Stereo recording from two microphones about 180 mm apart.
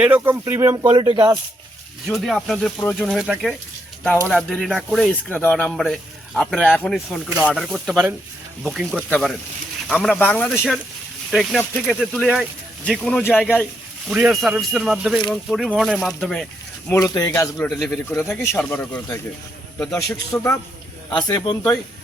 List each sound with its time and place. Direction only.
0.0 s speech: 10° right (ahead or behind)
2.0 s speech: centre (ahead or behind)
4.0 s speech: 5° left (ahead or behind)
7.3 s speech: 5° right (ahead or behind); by 10.5 s 10° left (ahead or behind)
10.5 s speech: 5° right (ahead or behind)
16.9 s speech: 15° left (ahead or behind)
17.7 s speech: 5° left (ahead or behind)